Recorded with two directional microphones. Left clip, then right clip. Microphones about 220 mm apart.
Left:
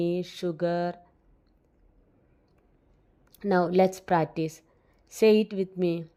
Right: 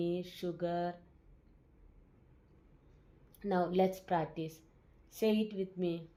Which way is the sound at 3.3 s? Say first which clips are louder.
Left 9 dB; 40° left (ahead or behind).